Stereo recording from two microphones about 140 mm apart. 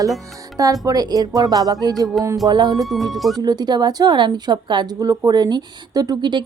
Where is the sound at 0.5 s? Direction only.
25° right (ahead or behind).